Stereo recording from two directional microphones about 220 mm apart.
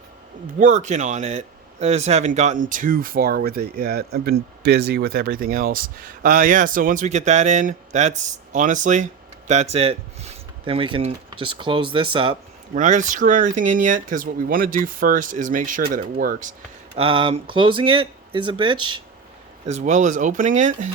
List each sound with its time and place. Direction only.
0.6 s speech: 35° right (ahead or behind)
12.7 s speech: 35° right (ahead or behind)
17.1 s speech: 25° right (ahead or behind)
19.6 s speech: 30° right (ahead or behind)